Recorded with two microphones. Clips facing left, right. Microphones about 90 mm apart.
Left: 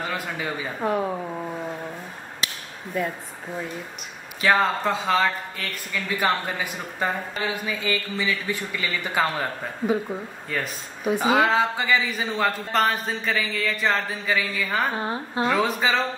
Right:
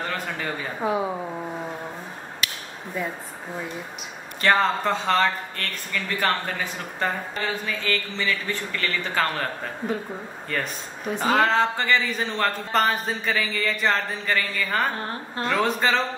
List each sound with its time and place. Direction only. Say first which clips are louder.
0.0 s speech: even; 5° left (ahead or behind)
0.7 s speech: even; 5° right (ahead or behind)
2.9 s speech: left 3 dB; centre (ahead or behind)
4.4 s speech: even; 5° left (ahead or behind)